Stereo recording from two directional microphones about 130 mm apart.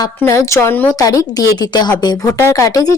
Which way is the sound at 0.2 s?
20° left (ahead or behind).